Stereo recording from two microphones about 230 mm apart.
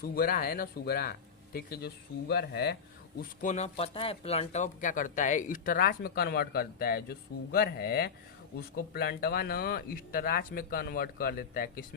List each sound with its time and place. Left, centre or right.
0.0 s speech: left
3.2 s speech: left